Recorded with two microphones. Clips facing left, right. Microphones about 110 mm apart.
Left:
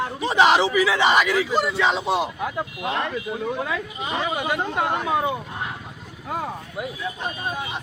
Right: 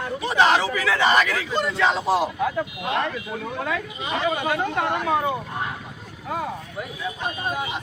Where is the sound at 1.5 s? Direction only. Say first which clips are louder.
Left 1 dB; 5° left (ahead or behind).